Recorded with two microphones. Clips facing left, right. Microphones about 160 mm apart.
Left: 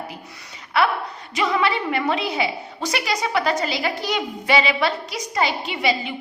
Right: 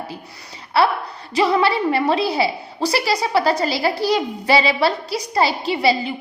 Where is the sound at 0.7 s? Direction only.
35° right (ahead or behind).